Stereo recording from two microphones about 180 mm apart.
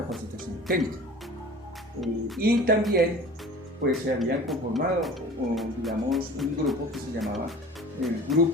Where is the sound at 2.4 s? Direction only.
55° right (ahead or behind).